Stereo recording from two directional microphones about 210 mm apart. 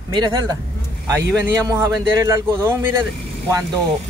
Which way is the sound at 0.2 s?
20° right (ahead or behind).